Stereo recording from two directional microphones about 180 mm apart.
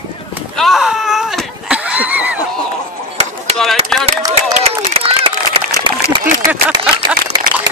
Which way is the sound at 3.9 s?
Centre (ahead or behind).